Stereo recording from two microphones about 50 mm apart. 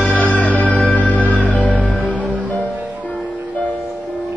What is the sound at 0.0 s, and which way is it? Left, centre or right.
Music, left.